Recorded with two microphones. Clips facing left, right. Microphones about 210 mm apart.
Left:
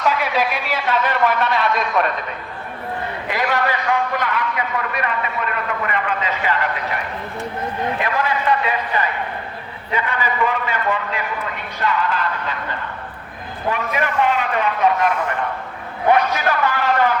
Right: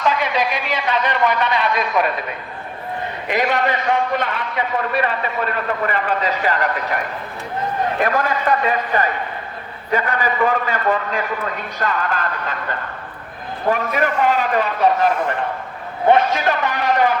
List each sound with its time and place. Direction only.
0.0 s a man's voice: 5° left (ahead or behind)
3.2 s a man's voice: 20° right (ahead or behind); by 12.5 s 45° right (ahead or behind)
13.7 s a man's voice: 45° right (ahead or behind)
16.0 s a man's voice: 25° right (ahead or behind)